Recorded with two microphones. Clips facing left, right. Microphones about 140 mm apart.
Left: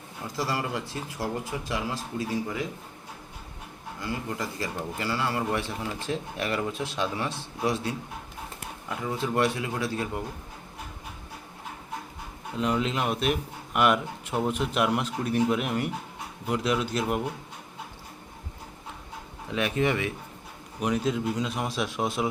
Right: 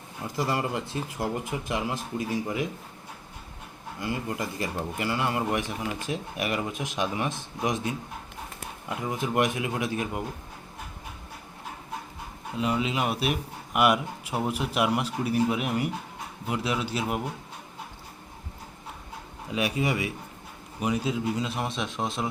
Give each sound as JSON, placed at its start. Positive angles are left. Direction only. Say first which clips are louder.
{"t": 0.3, "sound": "speech", "louder": "right 2 dB", "side_deg": -20}
{"t": 4.0, "sound": "a man's voice", "louder": "right 1 dB", "side_deg": -20}
{"t": 9.0, "sound": "a man's voice", "louder": "even", "side_deg": -15}
{"t": 12.5, "sound": "a man's voice", "louder": "even", "side_deg": -5}
{"t": 19.5, "sound": "a man's voice", "louder": "left 1 dB", "side_deg": -10}